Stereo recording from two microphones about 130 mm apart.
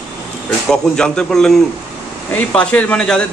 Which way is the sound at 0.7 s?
5° left (ahead or behind).